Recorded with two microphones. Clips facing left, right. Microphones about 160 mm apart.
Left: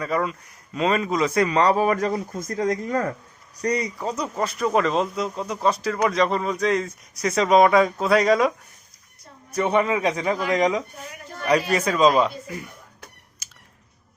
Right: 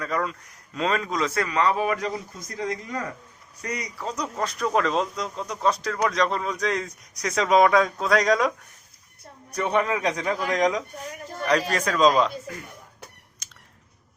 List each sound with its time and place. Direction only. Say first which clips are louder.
0.0 s speech: left 3 dB; 5° left (ahead or behind)
1.3 s a man's voice: left 6 dB; 20° left (ahead or behind)
1.5 s speech: left 2 dB; 35° left (ahead or behind)
3.6 s speech: left 9 dB; 35° left (ahead or behind)
4.1 s speech: even; 5° left (ahead or behind)
13.4 s clicking: right 1 dB; 5° left (ahead or behind)